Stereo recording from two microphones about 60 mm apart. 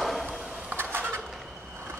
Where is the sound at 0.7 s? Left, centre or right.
Right.